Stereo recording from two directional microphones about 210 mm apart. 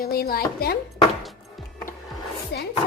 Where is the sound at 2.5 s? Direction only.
50° left (ahead or behind).